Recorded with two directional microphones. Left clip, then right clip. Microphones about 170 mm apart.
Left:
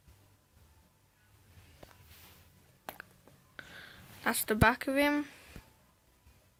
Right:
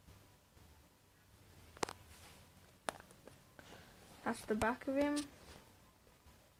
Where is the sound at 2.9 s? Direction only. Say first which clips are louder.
Right 2 dB; 25° right (ahead or behind).